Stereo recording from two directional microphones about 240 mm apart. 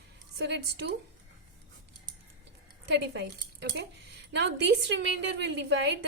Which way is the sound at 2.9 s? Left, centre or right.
Right.